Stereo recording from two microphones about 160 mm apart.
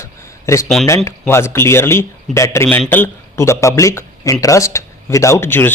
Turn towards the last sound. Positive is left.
turn(degrees=15)  # may be behind; listen again after turning